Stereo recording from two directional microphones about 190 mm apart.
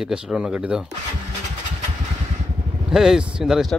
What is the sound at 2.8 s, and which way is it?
Speech, centre (ahead or behind).